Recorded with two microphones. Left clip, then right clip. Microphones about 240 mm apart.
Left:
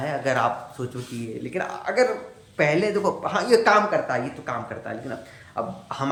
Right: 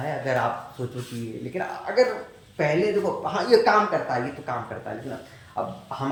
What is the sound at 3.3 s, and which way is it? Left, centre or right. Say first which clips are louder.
Speech: right 1 dB; centre.